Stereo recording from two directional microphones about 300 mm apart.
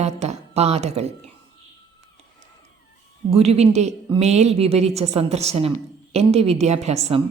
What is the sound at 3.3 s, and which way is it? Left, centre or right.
A woman's voice, right.